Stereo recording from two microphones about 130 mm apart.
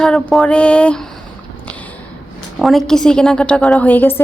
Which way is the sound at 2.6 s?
Centre (ahead or behind).